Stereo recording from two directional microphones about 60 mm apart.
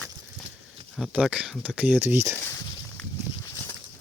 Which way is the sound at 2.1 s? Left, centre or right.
Right.